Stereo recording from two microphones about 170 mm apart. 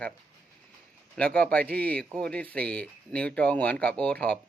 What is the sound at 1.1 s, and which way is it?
Speech, 5° left (ahead or behind).